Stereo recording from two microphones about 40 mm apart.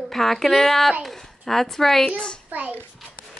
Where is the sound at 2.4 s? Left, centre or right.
Right.